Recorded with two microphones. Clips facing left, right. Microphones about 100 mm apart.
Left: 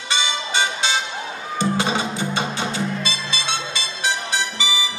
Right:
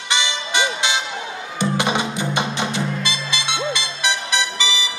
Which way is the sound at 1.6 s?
20° right (ahead or behind).